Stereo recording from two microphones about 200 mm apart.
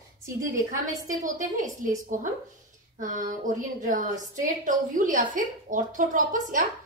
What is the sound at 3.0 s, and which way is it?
A woman's voice, 40° right (ahead or behind).